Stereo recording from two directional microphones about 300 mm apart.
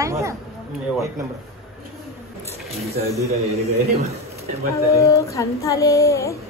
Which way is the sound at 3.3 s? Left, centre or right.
Right.